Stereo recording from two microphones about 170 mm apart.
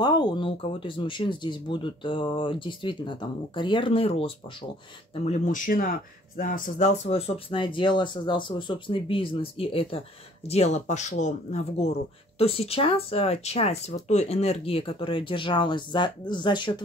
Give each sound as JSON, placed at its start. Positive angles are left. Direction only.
{"t": 0.0, "sound": "speech", "side_deg": 25}